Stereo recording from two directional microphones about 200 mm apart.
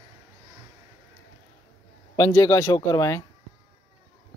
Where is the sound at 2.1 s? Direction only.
15° left (ahead or behind).